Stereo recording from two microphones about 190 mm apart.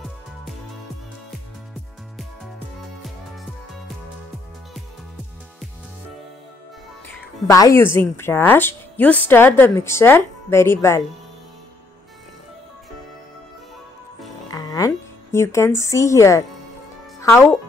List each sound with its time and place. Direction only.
7.2 s speech: 15° left (ahead or behind)
14.5 s music: 20° left (ahead or behind)
15.3 s speech: 15° left (ahead or behind)